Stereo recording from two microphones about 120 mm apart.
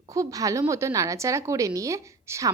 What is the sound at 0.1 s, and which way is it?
A woman's voice, 30° right (ahead or behind).